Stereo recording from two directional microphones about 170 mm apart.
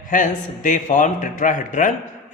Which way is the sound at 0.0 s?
50° left (ahead or behind).